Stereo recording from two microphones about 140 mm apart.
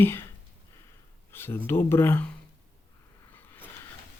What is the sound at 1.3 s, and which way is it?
Speech, 15° left (ahead or behind).